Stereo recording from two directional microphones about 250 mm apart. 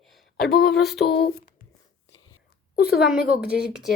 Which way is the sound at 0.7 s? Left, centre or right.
Centre.